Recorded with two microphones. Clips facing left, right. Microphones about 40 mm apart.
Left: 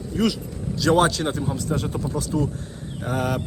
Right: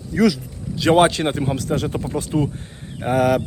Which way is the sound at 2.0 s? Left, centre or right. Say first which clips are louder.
Right 3 dB; right.